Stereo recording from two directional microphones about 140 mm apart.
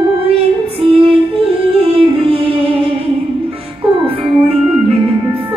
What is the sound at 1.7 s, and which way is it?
Yodeling, 40° right (ahead or behind).